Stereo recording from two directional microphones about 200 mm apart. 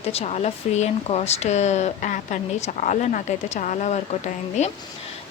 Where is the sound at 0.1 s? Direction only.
30° left (ahead or behind).